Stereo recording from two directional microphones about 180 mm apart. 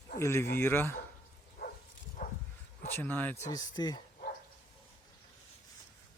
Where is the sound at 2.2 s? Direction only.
50° left (ahead or behind).